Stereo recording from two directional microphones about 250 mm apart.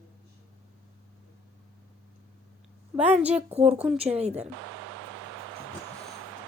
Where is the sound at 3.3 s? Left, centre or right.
Right.